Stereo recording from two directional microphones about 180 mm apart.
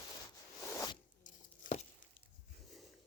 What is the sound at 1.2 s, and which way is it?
Tearing, 45° left (ahead or behind).